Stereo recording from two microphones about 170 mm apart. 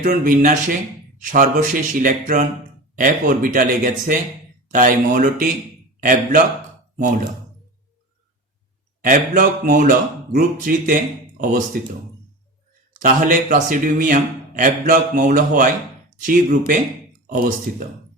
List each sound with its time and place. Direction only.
0.0 s a man's voice: 55° right (ahead or behind)
9.0 s speech: 55° right (ahead or behind)
13.0 s speech: 55° right (ahead or behind)